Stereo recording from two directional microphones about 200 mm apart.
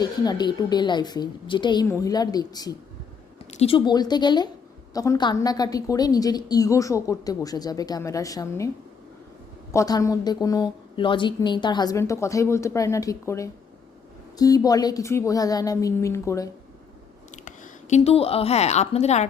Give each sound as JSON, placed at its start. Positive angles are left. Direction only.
{"t": 0.0, "sound": "a woman's voice", "side_deg": 20}
{"t": 3.5, "sound": "a woman's voice", "side_deg": 30}
{"t": 9.7, "sound": "a woman's voice", "side_deg": 15}
{"t": 17.3, "sound": "speech", "side_deg": 35}